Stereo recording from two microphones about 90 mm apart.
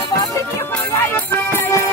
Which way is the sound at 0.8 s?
20° left (ahead or behind).